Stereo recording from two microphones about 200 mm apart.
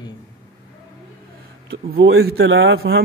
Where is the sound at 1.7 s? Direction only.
60° right (ahead or behind).